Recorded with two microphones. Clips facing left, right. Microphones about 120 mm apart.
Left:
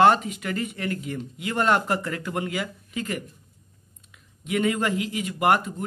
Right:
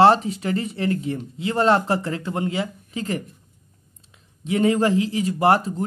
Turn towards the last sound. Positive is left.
turn(degrees=-35)  # may be behind; listen again after turning